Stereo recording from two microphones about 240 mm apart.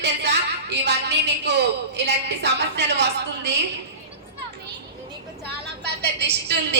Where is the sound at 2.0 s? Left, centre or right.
Right.